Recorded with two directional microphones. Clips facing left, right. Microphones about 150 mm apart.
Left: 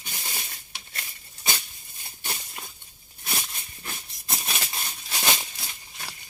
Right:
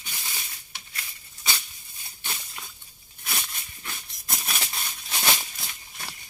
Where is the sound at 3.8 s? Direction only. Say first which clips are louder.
Left 2 dB; 30° left (ahead or behind).